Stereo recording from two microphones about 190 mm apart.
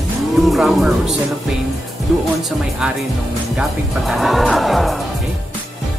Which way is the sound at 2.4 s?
5° right (ahead or behind).